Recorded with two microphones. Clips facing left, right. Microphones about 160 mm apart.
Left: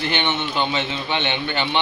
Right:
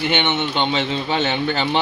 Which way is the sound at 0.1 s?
20° right (ahead or behind).